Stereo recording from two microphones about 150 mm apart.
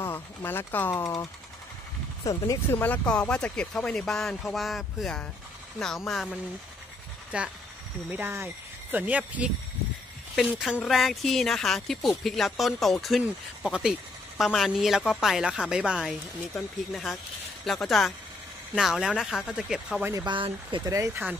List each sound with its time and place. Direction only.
0.0 s speech: 15° left (ahead or behind)
2.2 s speech: 20° left (ahead or behind); by 6.3 s centre (ahead or behind)
7.3 s speech: 5° right (ahead or behind)
10.5 s speech: 5° right (ahead or behind)
20.1 s speech: 25° right (ahead or behind)
20.3 s speech: 35° right (ahead or behind)
20.9 s speech: 20° right (ahead or behind)